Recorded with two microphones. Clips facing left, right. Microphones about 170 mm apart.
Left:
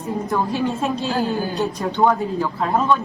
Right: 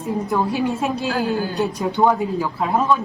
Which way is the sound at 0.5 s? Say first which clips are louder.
Even; 10° right (ahead or behind).